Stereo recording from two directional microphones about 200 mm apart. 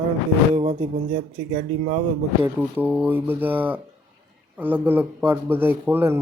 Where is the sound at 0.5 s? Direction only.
30° right (ahead or behind).